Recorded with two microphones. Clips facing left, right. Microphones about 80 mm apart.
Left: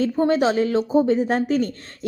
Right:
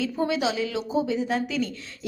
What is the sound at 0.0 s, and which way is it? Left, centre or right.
A woman's voice, left.